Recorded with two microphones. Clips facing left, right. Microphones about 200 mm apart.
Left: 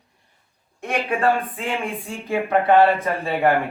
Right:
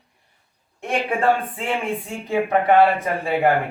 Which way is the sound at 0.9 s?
30° right (ahead or behind).